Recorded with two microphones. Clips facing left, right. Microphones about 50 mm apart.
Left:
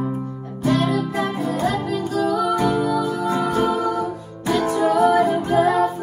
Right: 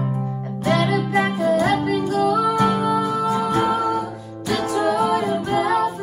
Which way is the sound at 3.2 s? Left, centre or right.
Left.